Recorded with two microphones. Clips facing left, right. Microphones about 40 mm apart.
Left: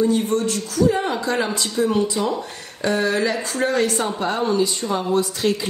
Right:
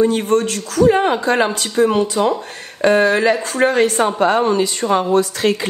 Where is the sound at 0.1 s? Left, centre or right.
Right.